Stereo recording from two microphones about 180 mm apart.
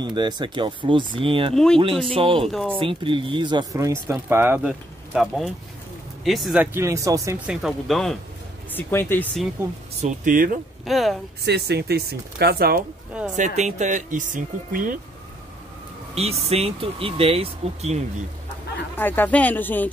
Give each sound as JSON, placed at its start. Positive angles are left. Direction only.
{"t": 0.0, "sound": "speech", "side_deg": -25}
{"t": 1.5, "sound": "speech", "side_deg": 5}
{"t": 2.1, "sound": "speech", "side_deg": -30}
{"t": 7.4, "sound": "speech", "side_deg": 0}
{"t": 9.9, "sound": "speech", "side_deg": -45}
{"t": 10.9, "sound": "speech", "side_deg": 0}
{"t": 11.4, "sound": "speech", "side_deg": -65}
{"t": 13.2, "sound": "speech", "side_deg": -5}
{"t": 13.6, "sound": "speech", "side_deg": -40}
{"t": 16.2, "sound": "speech", "side_deg": -35}
{"t": 18.9, "sound": "speech", "side_deg": 10}